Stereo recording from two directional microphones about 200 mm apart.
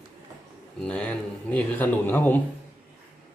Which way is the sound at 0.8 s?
5° left (ahead or behind).